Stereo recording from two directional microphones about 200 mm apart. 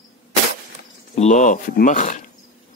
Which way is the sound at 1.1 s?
35° left (ahead or behind).